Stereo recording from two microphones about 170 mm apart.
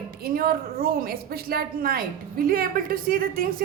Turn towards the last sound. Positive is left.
turn(degrees=-60)  # may be behind; listen again after turning